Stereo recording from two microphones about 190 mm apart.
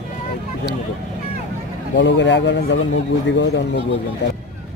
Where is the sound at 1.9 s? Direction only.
70° left (ahead or behind).